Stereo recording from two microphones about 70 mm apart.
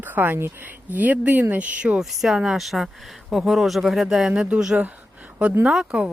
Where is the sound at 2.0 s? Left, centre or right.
Centre.